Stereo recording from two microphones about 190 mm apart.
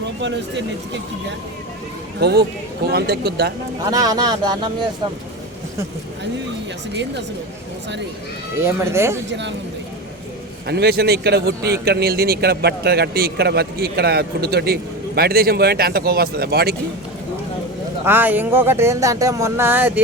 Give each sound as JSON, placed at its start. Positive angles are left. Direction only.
{"t": 0.0, "sound": "speech", "side_deg": -70}
{"t": 2.2, "sound": "a man's voice", "side_deg": -55}
{"t": 3.8, "sound": "speech", "side_deg": -20}
{"t": 8.6, "sound": "speech", "side_deg": -15}
{"t": 9.3, "sound": "speech", "side_deg": -70}
{"t": 10.7, "sound": "a man's voice", "side_deg": -60}
{"t": 18.0, "sound": "speech", "side_deg": -10}